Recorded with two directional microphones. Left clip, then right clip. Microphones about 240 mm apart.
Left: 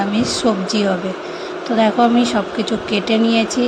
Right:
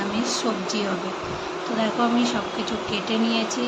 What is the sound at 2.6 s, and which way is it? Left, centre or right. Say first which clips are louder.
Speech: left 7 dB; left.